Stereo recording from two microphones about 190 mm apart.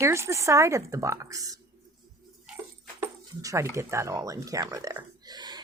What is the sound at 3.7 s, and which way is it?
Speech, 15° right (ahead or behind).